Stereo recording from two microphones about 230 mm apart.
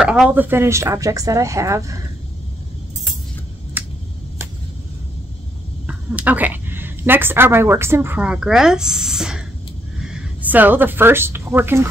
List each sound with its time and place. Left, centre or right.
0.0 s speech: centre
5.9 s speech: centre